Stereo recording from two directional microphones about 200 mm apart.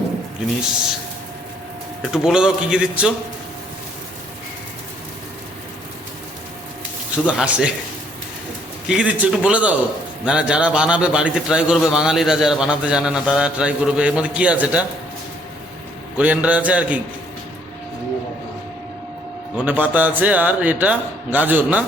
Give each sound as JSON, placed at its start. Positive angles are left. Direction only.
{"t": 2.0, "sound": "a man's voice", "side_deg": 0}
{"t": 7.3, "sound": "a man's voice", "side_deg": -5}
{"t": 8.9, "sound": "a man's voice", "side_deg": -5}
{"t": 16.1, "sound": "a man's voice", "side_deg": -5}
{"t": 19.5, "sound": "a man's voice", "side_deg": -10}